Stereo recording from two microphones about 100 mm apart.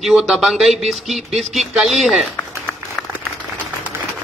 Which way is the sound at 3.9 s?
25° right (ahead or behind).